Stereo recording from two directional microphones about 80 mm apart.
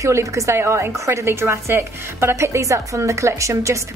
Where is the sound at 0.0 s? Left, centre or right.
Right.